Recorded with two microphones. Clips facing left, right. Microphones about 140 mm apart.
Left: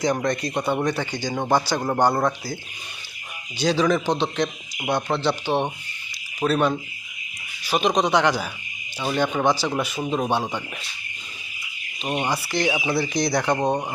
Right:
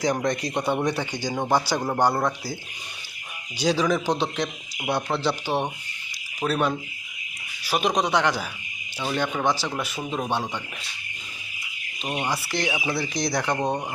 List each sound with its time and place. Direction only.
0.0 s speech: 15° right (ahead or behind)
3.6 s speech: 10° right (ahead or behind)
12.0 s speech: 25° left (ahead or behind)
12.3 s speech: centre (ahead or behind)